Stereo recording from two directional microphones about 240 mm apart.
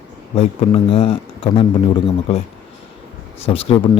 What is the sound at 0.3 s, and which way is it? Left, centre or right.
Speech, left.